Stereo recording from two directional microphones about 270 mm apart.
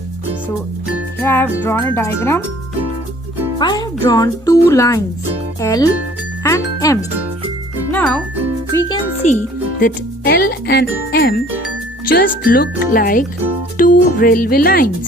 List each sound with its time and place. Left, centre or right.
1.2 s a child's voice: centre
3.6 s a child's voice: centre
6.4 s music: centre
8.7 s a child's voice: centre
9.2 s speech: left
9.8 s speech: left